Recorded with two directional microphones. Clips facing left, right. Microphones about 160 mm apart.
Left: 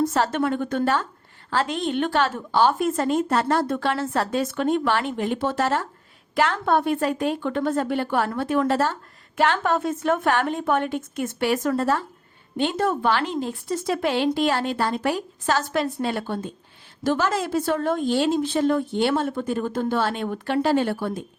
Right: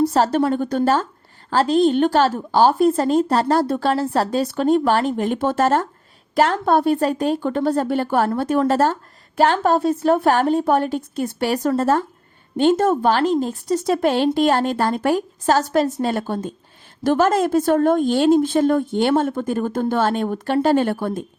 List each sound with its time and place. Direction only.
0.1 s a woman's voice: 35° right (ahead or behind)